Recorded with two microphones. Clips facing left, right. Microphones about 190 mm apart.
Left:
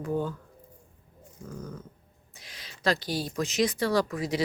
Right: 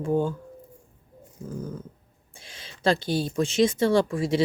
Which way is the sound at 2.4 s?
30° right (ahead or behind).